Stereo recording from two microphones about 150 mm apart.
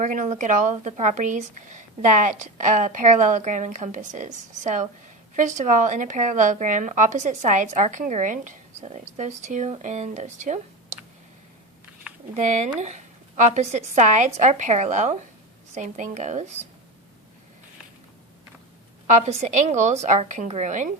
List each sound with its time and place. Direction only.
0.0 s speech: 55° right (ahead or behind)
12.1 s a sound: 5° right (ahead or behind)
12.4 s a woman's voice: 55° right (ahead or behind)
19.0 s a woman's voice: 50° right (ahead or behind)